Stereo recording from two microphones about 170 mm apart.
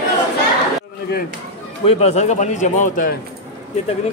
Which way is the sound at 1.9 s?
40° left (ahead or behind).